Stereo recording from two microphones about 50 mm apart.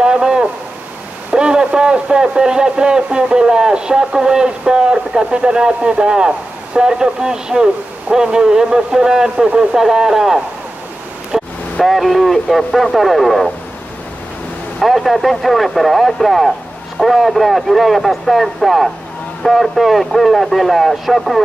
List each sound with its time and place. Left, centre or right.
0.0 s a sound: centre
1.3 s a man's voice: centre
11.3 s vehicle: centre
11.8 s speech: centre
14.8 s speech: centre